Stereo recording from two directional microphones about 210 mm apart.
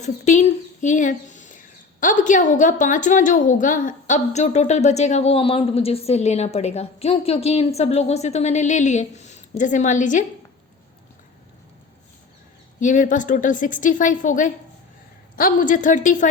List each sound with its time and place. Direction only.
0.0 s speech: 35° left (ahead or behind)
12.8 s speech: 35° left (ahead or behind)